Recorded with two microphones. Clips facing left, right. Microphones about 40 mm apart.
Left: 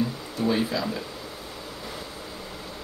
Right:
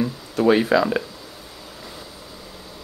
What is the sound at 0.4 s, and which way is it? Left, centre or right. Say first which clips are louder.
Speech: right 9 dB; right.